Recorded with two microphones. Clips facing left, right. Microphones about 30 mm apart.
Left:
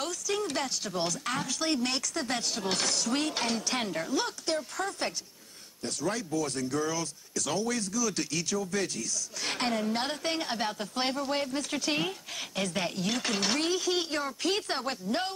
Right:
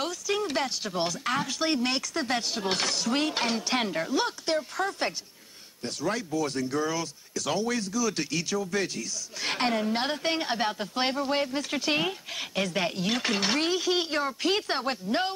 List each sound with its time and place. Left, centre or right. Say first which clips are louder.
0.0 s speech: right 3 dB; centre